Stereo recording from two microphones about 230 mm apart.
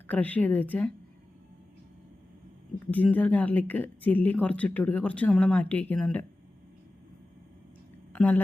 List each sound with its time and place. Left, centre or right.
0.1 s speech: centre
2.9 s speech: centre
8.1 s a woman's voice: centre